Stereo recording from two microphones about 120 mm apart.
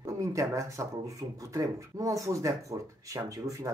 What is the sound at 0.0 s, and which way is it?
Speech, 25° right (ahead or behind).